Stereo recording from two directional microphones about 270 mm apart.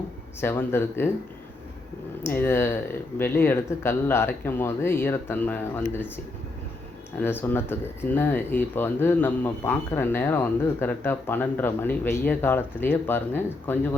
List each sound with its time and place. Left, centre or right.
0.3 s speech: centre
2.2 s speech: centre
7.2 s speech: centre